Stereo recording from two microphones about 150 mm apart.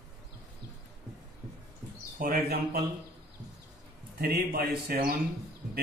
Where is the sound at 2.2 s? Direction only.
75° right (ahead or behind).